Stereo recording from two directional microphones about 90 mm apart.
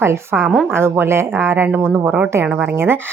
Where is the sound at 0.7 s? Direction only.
25° right (ahead or behind).